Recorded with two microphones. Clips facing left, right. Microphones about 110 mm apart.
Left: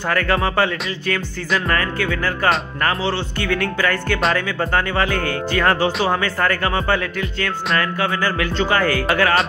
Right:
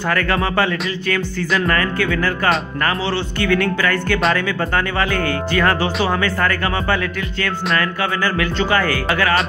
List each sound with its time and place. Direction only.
0.1 s music: 25° left (ahead or behind)
1.7 s music: 25° left (ahead or behind)
3.3 s speech: 35° left (ahead or behind)